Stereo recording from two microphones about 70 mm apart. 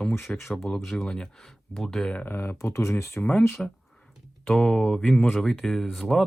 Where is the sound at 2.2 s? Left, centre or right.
Left.